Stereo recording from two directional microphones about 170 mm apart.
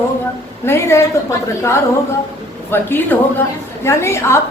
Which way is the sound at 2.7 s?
10° left (ahead or behind).